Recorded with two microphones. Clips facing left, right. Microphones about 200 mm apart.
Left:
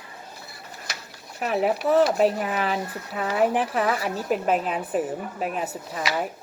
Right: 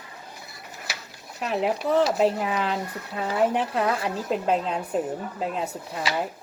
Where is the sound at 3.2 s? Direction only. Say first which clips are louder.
Left 1 dB; 5° left (ahead or behind).